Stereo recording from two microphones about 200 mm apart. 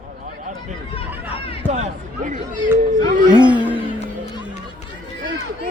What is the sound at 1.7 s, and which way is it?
Speech, 35° right (ahead or behind).